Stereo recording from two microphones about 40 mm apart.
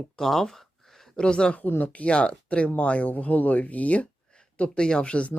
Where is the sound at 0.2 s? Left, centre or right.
Centre.